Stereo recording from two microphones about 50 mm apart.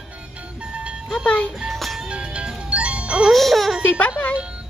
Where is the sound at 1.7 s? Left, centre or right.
Centre.